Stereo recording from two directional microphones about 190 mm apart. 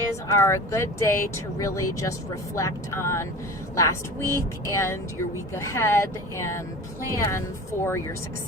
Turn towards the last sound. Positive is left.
turn(degrees=10)  # may be behind; listen again after turning